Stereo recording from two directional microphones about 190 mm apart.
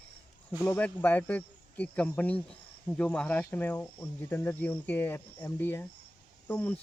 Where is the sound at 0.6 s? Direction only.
10° left (ahead or behind).